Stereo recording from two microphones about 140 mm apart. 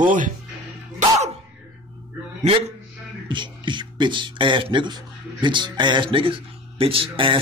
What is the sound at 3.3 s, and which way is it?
A man's voice, 35° right (ahead or behind).